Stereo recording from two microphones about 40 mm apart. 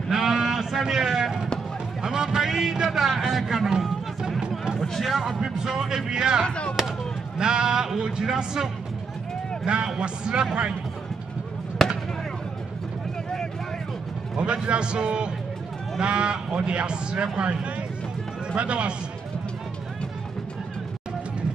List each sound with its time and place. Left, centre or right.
0.1 s sheep: centre
0.8 s speech: centre
4.4 s music: centre
4.8 s speech: centre
5.1 s speech: centre
6.4 s speech: left
7.3 s speech: centre
9.9 s speech: right
14.3 s speech: right